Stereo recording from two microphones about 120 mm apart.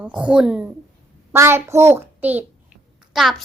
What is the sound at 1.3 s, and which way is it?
A child's voice, 20° right (ahead or behind).